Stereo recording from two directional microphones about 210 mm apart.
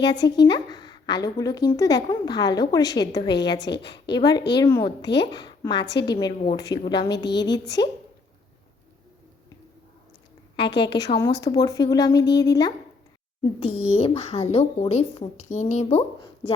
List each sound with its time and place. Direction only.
0.0 s speech: 55° left (ahead or behind)
0.3 s a sound: 20° left (ahead or behind)
1.2 s a woman's voice: 15° left (ahead or behind)
3.2 s a woman's voice: 55° left (ahead or behind)
4.1 s a woman's voice: 20° left (ahead or behind)
5.0 s speech: 55° left (ahead or behind)
5.3 s a woman's voice: 20° left (ahead or behind)
10.8 s a woman's voice: 20° left (ahead or behind)
13.4 s a woman's voice: 30° left (ahead or behind)